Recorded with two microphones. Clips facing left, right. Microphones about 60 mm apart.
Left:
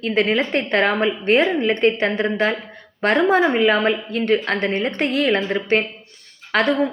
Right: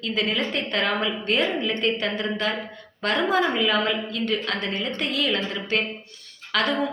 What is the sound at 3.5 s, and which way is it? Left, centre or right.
A woman's voice, left.